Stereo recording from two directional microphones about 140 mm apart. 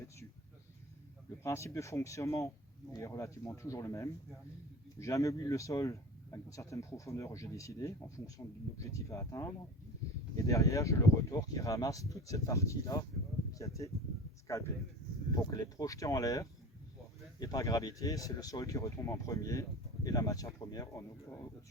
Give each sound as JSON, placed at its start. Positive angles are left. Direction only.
{"t": 1.5, "sound": "speech", "side_deg": 20}
{"t": 15.4, "sound": "speech", "side_deg": 25}